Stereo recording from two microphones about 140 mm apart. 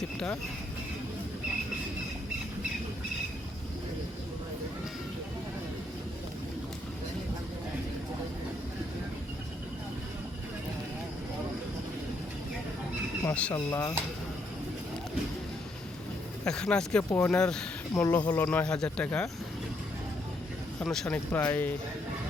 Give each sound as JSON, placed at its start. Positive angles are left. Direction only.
{"t": 13.2, "sound": "speech", "side_deg": 10}
{"t": 13.5, "sound": "speech", "side_deg": 20}
{"t": 16.4, "sound": "speech", "side_deg": 5}
{"t": 20.7, "sound": "speech", "side_deg": 5}